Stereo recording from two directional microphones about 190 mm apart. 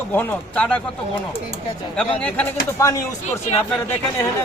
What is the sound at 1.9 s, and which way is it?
Speech, 5° left (ahead or behind).